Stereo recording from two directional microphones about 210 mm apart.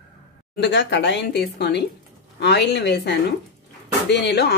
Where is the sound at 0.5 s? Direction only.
55° left (ahead or behind).